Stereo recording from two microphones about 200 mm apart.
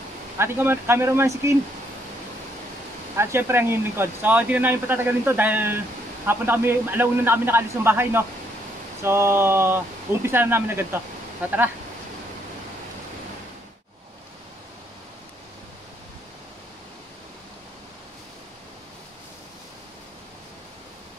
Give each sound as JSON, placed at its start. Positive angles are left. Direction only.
{"t": 0.4, "sound": "speech", "side_deg": -10}
{"t": 3.2, "sound": "speech", "side_deg": -10}